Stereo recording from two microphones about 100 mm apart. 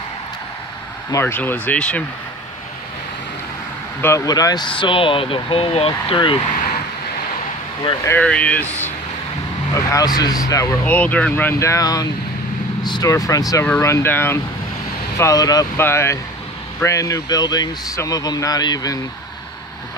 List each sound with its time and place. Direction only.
1.2 s speech: 20° left (ahead or behind)
4.0 s speech: 30° left (ahead or behind)
4.3 s speech: 40° left (ahead or behind)
4.6 s speech: 60° left (ahead or behind); by 6.1 s 75° left (ahead or behind)
6.1 s speech: 55° left (ahead or behind)
8.2 s speech: 10° left (ahead or behind)
9.8 s speech: 35° left (ahead or behind)
10.9 s speech: 15° left (ahead or behind)
11.6 s speech: 35° left (ahead or behind)
15.1 s speech: 35° left (ahead or behind)
15.8 s speech: 25° left (ahead or behind); by 18.9 s 40° left (ahead or behind)